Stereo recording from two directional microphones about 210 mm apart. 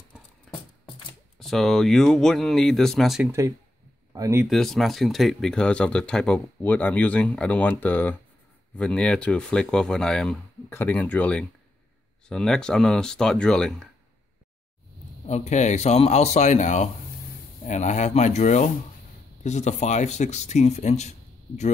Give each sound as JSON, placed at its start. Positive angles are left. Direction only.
{"t": 0.5, "sound": "a sound", "side_deg": 0}
{"t": 1.4, "sound": "speech", "side_deg": 0}
{"t": 3.3, "sound": "speech", "side_deg": -15}
{"t": 4.5, "sound": "speech", "side_deg": 0}
{"t": 15.2, "sound": "a man's voice", "side_deg": 30}